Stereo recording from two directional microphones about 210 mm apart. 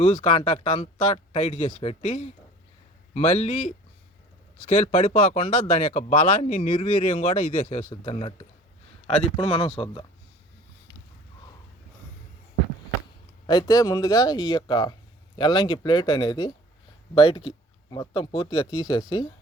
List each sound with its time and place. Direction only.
0.0 s a man's voice: 25° left (ahead or behind)
13.5 s speech: 15° left (ahead or behind)